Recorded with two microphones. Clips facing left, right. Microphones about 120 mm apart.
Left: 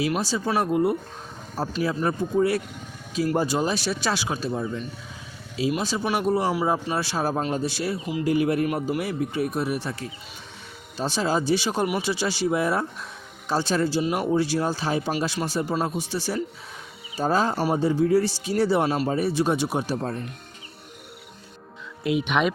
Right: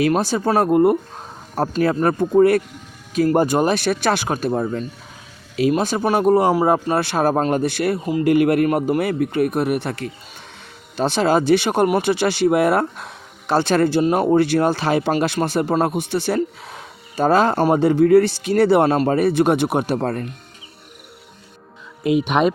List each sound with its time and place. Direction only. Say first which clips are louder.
0.1 s speech: right 7 dB; 55° right (ahead or behind)
22.0 s speech: right 6 dB; 45° right (ahead or behind)